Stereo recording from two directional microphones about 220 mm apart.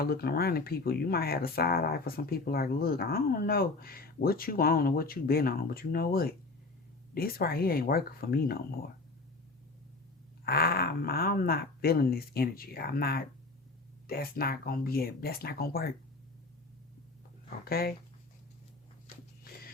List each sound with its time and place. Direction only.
0.0 s speech: 45° left (ahead or behind)
10.4 s speech: 45° left (ahead or behind)
17.7 s speech: 45° left (ahead or behind)